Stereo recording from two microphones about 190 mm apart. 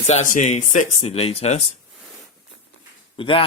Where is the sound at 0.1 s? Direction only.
40° left (ahead or behind).